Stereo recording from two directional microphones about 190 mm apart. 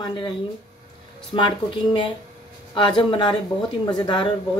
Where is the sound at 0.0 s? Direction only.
20° left (ahead or behind).